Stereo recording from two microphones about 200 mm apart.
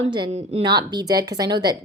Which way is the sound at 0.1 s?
20° right (ahead or behind).